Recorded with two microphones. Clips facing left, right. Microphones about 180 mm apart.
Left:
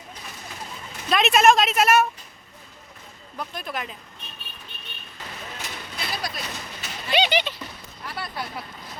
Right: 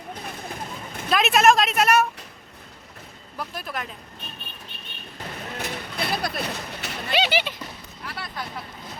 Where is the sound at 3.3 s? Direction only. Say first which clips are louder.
Even; 5° right (ahead or behind).